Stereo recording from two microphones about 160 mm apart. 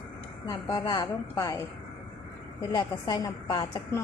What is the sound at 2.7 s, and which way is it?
A woman's voice, 25° left (ahead or behind).